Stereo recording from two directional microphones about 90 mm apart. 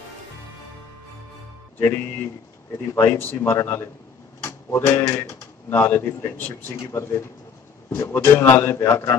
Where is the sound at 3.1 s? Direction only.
20° left (ahead or behind).